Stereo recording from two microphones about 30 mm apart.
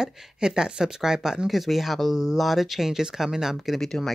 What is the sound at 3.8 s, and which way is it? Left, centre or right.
Speech, centre.